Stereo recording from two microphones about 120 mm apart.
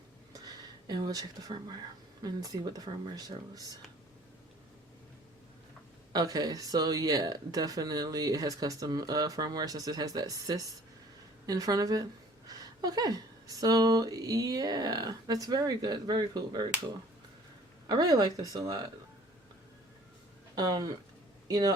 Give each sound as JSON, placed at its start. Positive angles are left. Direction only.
{"t": 0.3, "sound": "a sound", "side_deg": -35}
{"t": 2.2, "sound": "speech", "side_deg": -30}
{"t": 6.1, "sound": "speech", "side_deg": -30}
{"t": 17.8, "sound": "speech", "side_deg": -30}
{"t": 20.6, "sound": "speech", "side_deg": -35}